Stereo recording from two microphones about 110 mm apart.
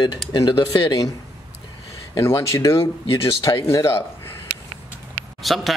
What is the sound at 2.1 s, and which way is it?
Speech, 25° left (ahead or behind).